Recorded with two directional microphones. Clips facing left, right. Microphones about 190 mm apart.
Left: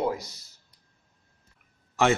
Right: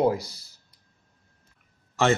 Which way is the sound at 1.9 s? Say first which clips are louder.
Right 1 dB; 10° left (ahead or behind).